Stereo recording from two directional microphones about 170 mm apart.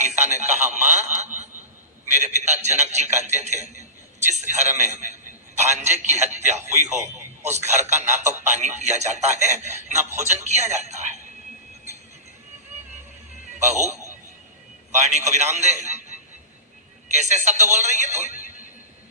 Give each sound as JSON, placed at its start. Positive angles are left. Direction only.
{"t": 0.0, "sound": "a sound", "side_deg": -45}
{"t": 2.1, "sound": "speech", "side_deg": -45}
{"t": 6.9, "sound": "radio", "side_deg": -15}
{"t": 7.5, "sound": "speech", "side_deg": -40}
{"t": 13.6, "sound": "speech", "side_deg": -45}
{"t": 15.1, "sound": "speech", "side_deg": -45}
{"t": 18.3, "sound": "neigh", "side_deg": 55}